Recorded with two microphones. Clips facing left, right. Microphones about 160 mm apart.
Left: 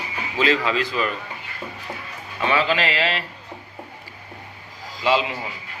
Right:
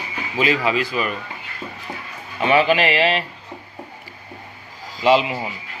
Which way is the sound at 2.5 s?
20° right (ahead or behind).